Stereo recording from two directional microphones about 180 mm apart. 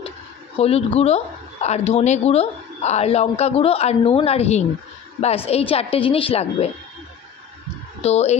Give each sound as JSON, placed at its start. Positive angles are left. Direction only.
{"t": 0.6, "sound": "speech", "side_deg": 35}
{"t": 8.0, "sound": "speech", "side_deg": 35}